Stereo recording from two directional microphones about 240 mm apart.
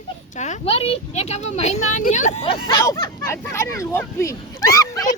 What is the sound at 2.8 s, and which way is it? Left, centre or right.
Speech, centre.